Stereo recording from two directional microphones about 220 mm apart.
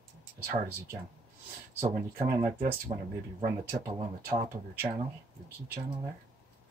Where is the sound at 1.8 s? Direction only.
35° right (ahead or behind).